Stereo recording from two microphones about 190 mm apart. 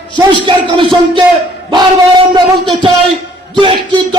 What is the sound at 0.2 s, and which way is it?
Speech, 25° right (ahead or behind).